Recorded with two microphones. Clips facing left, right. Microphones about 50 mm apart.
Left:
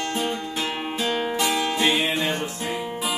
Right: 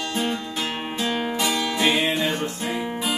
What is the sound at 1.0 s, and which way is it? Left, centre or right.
Music, centre.